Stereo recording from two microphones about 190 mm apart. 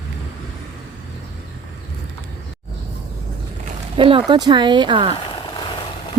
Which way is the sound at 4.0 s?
30° right (ahead or behind).